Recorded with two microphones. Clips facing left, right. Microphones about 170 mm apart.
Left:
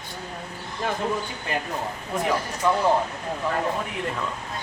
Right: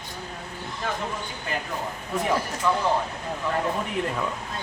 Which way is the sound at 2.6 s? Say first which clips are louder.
Left 2 dB; 15° left (ahead or behind).